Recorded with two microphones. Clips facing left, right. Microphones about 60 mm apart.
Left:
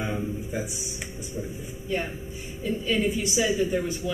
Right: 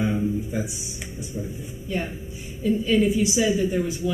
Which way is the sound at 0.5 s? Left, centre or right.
Centre.